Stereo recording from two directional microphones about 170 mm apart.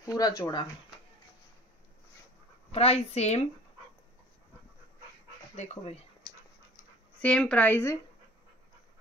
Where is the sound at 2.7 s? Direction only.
35° left (ahead or behind).